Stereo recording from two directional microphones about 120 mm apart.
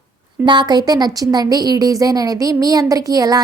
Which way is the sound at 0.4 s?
35° right (ahead or behind).